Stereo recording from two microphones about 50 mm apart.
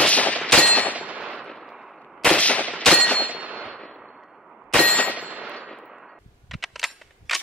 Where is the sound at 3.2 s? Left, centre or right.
Right.